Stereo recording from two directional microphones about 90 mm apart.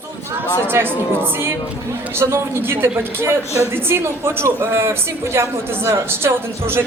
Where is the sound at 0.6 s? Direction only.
25° right (ahead or behind).